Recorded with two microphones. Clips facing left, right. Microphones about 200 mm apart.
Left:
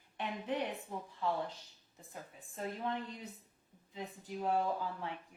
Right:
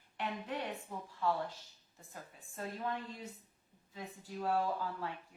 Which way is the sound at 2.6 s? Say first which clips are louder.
Left 1 dB; 20° left (ahead or behind).